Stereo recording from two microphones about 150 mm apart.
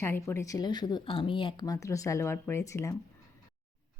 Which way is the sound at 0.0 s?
15° left (ahead or behind).